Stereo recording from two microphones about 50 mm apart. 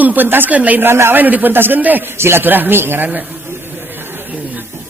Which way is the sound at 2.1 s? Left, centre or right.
Right.